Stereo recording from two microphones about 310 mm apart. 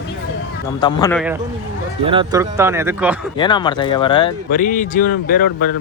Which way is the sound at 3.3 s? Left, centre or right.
Centre.